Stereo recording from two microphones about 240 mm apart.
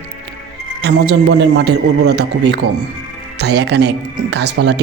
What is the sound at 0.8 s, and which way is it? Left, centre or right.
Speech, right.